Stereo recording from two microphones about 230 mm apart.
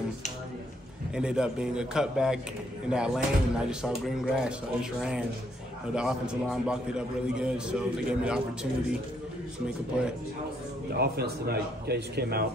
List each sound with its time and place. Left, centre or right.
1.1 s a man's voice: centre
5.9 s a man's voice: centre
10.9 s speech: right